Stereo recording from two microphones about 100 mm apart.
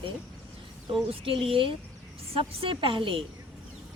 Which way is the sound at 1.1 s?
65° right (ahead or behind).